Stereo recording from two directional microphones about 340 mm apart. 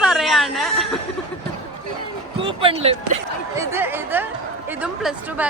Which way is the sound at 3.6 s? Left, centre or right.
Centre.